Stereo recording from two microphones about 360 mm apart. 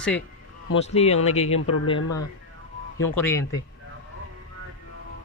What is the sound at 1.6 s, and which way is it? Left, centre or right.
Speech, left.